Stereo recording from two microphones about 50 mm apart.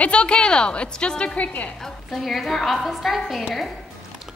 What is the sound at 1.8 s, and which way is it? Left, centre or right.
A woman's voice, centre.